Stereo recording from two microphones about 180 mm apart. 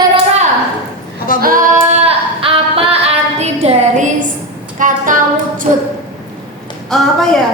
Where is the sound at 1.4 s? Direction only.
50° right (ahead or behind); by 3.0 s 30° right (ahead or behind).